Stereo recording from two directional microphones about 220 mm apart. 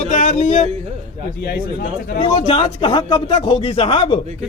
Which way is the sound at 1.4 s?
45° left (ahead or behind).